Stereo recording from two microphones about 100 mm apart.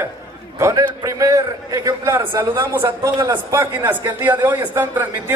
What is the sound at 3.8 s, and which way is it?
Speech, 20° right (ahead or behind).